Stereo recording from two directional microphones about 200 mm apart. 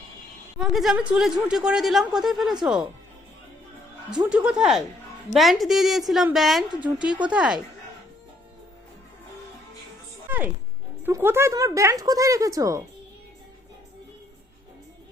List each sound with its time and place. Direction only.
0.6 s a woman's voice: centre (ahead or behind)
4.3 s a woman's voice: 5° right (ahead or behind)
10.2 s speech: 10° right (ahead or behind)